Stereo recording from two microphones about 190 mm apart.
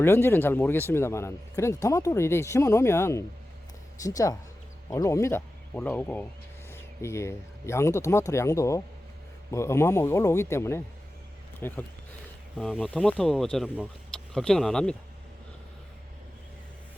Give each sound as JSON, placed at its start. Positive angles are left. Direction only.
{"t": 0.0, "sound": "speech", "side_deg": 10}